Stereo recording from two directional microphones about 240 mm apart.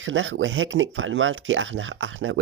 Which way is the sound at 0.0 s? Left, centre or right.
Right.